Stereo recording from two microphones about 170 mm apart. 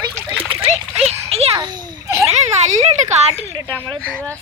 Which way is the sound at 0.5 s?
35° right (ahead or behind).